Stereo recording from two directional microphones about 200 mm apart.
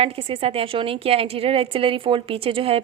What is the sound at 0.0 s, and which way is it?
A woman's voice, 30° right (ahead or behind).